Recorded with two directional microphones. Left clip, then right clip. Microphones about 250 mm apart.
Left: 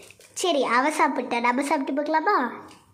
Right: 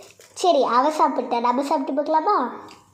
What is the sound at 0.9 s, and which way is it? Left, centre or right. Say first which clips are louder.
Speech: right 3 dB; centre.